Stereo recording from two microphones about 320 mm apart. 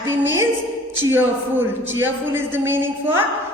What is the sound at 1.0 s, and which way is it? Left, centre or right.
A man's voice, centre.